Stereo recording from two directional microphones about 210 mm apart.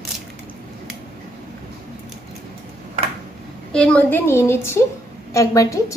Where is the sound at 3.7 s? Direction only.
5° left (ahead or behind).